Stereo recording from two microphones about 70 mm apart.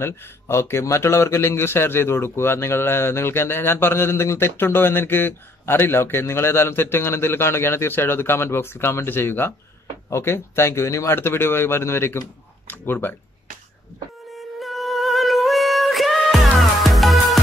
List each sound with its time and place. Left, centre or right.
0.0 s a man's voice: left
14.3 s music: centre